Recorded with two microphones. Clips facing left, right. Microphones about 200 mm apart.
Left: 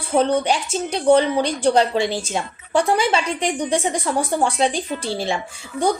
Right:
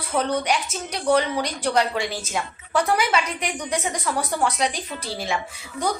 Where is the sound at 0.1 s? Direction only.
30° left (ahead or behind).